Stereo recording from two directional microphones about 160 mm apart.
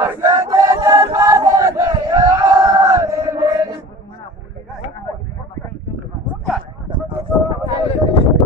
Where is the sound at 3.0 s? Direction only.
20° right (ahead or behind).